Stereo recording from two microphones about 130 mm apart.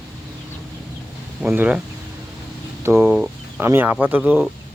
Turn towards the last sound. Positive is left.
turn(degrees=-15)  # may be behind; listen again after turning